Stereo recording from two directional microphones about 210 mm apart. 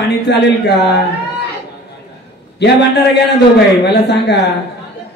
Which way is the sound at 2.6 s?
55° left (ahead or behind).